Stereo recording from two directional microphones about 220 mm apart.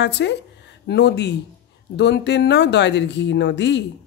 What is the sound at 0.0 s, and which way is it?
A woman's voice, 50° left (ahead or behind).